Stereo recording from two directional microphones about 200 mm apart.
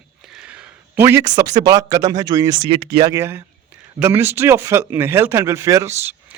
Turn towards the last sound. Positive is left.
turn(degrees=-10)  # may be behind; listen again after turning